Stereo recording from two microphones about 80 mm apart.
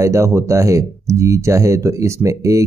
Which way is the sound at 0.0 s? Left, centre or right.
Right.